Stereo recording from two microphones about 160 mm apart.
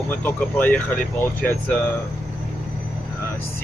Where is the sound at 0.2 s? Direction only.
10° left (ahead or behind).